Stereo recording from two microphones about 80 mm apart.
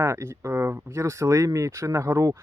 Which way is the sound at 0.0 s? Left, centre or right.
Right.